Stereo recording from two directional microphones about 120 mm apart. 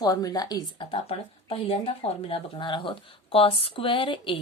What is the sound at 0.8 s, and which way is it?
A woman's voice, 50° left (ahead or behind).